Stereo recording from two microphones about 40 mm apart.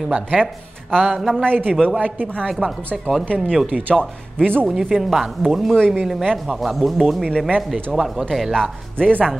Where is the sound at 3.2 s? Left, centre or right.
Left.